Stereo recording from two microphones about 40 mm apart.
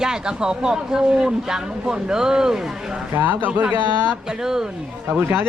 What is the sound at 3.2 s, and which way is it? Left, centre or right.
Speech, right.